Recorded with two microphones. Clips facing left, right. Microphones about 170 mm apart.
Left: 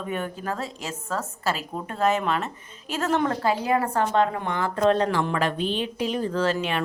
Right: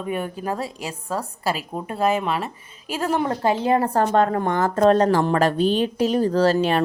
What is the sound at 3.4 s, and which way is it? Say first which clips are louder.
A woman's voice: right 4 dB; 25° right (ahead or behind).